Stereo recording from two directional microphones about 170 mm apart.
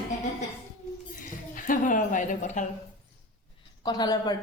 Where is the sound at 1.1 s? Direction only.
50° left (ahead or behind).